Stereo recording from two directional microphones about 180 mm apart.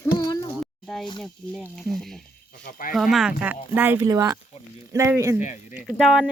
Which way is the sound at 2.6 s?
50° left (ahead or behind).